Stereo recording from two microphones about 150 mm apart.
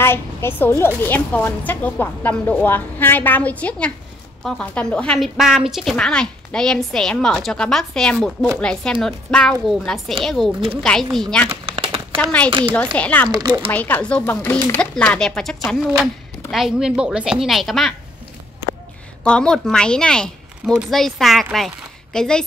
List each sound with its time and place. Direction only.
0.0 s a woman's voice: 15° left (ahead or behind)
11.6 s a sound: 40° right (ahead or behind)
12.2 s a woman's voice: 10° left (ahead or behind)
12.4 s speech: 35° right (ahead or behind)
12.9 s a woman's voice: 10° left (ahead or behind)
13.3 s speech: 30° right (ahead or behind)
13.7 s speech: 10° left (ahead or behind)
19.2 s speech: 5° left (ahead or behind)